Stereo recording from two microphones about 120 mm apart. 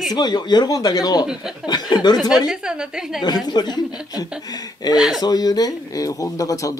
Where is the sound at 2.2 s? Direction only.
5° right (ahead or behind).